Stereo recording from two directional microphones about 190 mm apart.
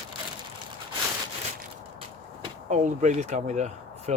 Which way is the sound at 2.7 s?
40° right (ahead or behind).